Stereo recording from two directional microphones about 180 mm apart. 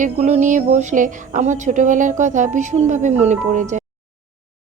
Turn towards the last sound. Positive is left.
turn(degrees=-40)  # may be behind; listen again after turning